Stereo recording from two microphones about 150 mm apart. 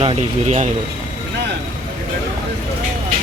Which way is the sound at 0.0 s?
45° right (ahead or behind).